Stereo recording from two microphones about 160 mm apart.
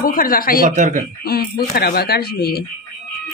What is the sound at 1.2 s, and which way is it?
Speech, 70° left (ahead or behind).